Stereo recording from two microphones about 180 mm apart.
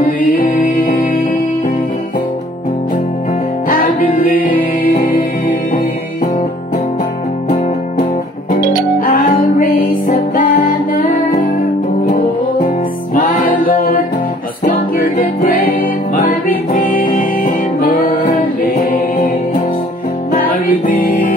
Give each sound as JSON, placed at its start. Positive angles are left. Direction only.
{"t": 0.0, "sound": "music", "side_deg": 50}
{"t": 3.6, "sound": "music", "side_deg": 55}
{"t": 9.0, "sound": "music", "side_deg": 50}
{"t": 15.1, "sound": "music", "side_deg": 55}